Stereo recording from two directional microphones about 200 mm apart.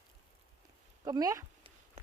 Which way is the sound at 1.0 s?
20° right (ahead or behind).